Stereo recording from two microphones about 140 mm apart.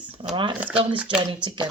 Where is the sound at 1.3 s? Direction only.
35° right (ahead or behind).